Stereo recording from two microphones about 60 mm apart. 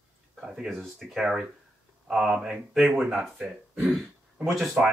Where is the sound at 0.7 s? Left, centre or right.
Centre.